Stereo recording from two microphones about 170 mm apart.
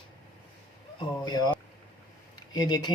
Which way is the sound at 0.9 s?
25° left (ahead or behind).